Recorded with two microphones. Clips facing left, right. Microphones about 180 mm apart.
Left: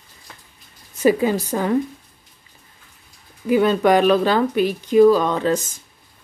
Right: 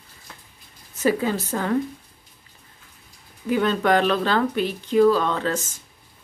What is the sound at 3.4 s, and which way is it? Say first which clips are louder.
Speech: left 5 dB; 10° left (ahead or behind).